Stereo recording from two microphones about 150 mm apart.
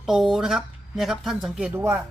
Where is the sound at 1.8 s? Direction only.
15° right (ahead or behind).